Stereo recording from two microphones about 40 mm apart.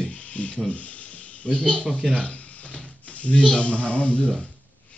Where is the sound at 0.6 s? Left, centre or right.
Left.